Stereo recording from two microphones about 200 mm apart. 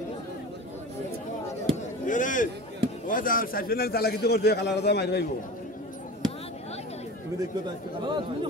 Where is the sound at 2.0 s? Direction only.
40° left (ahead or behind).